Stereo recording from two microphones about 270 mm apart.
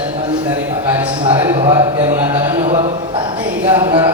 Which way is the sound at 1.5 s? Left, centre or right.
Centre.